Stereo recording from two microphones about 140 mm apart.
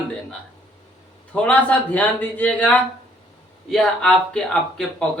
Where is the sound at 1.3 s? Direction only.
10° left (ahead or behind).